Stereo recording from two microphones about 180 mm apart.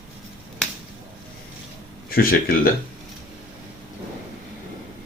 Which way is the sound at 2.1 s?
55° left (ahead or behind).